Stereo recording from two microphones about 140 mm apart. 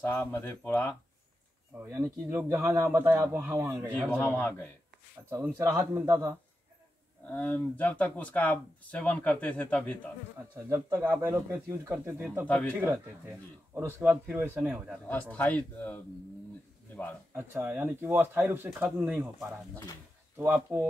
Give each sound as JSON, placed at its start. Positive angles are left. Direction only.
{"t": 0.0, "sound": "speech", "side_deg": 15}
{"t": 1.9, "sound": "speech", "side_deg": -20}
{"t": 4.1, "sound": "speech", "side_deg": 15}
{"t": 5.3, "sound": "speech", "side_deg": -15}
{"t": 7.2, "sound": "speech", "side_deg": 10}
{"t": 10.5, "sound": "speech", "side_deg": -20}
{"t": 12.4, "sound": "speech", "side_deg": 10}
{"t": 12.7, "sound": "speech", "side_deg": -15}
{"t": 15.0, "sound": "speech", "side_deg": 10}
{"t": 17.3, "sound": "speech", "side_deg": -15}
{"t": 20.3, "sound": "speech", "side_deg": -15}